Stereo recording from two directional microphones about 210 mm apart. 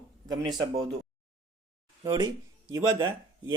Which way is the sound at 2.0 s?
20° right (ahead or behind).